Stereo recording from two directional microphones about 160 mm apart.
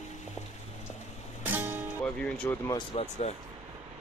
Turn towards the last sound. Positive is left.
turn(degrees=45)  # may be behind; listen again after turning